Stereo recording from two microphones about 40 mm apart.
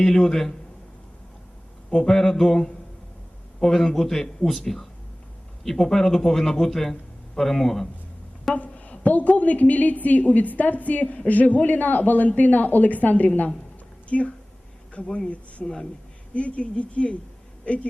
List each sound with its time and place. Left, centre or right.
0.0 s a man's voice: centre
1.9 s a man's voice: centre
8.5 s a woman's voice: left
15.6 s a man's voice: centre
16.3 s a woman's voice: left